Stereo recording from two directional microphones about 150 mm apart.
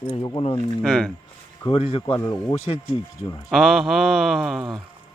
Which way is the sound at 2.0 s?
15° left (ahead or behind).